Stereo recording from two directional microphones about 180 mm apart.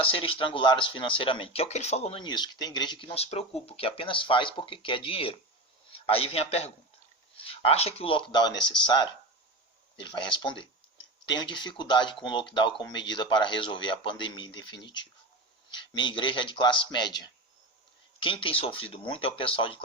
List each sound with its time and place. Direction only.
0.0 s speech: 30° left (ahead or behind)